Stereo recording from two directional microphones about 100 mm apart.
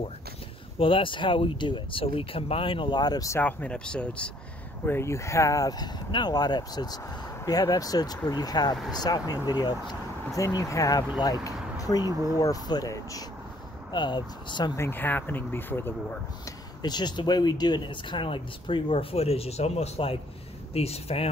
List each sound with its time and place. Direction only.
0.7 s speech: 60° left (ahead or behind); by 3.3 s 45° left (ahead or behind)
3.3 s speech: 20° left (ahead or behind)
4.8 s speech: 25° left (ahead or behind); by 10.4 s 45° left (ahead or behind)
10.4 s speech: 35° left (ahead or behind)
13.9 s speech: 50° left (ahead or behind)
14.8 s speech: 20° left (ahead or behind)
16.4 s speech: 45° left (ahead or behind); by 21.3 s 85° left